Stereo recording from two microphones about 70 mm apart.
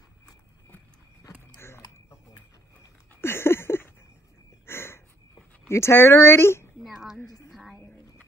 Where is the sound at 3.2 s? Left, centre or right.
Left.